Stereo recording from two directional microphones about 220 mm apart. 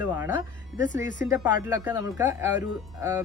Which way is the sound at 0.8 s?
35° left (ahead or behind).